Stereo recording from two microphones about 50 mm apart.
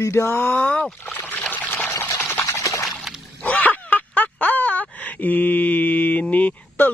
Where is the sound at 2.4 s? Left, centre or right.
Left.